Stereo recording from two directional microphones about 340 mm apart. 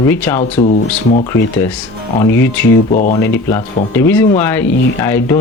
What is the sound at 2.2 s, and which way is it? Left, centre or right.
Speech, centre.